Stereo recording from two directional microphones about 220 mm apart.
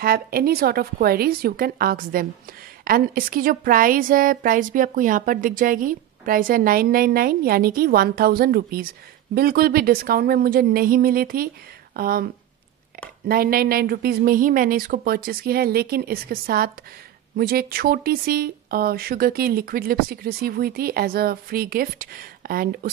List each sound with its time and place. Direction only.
0.0 s a woman's voice: 45° right (ahead or behind)
13.3 s speech: 40° right (ahead or behind)